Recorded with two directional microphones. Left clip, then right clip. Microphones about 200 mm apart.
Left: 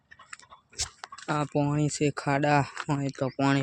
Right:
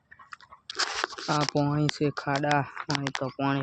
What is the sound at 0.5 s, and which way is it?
Crunch, 75° left (ahead or behind).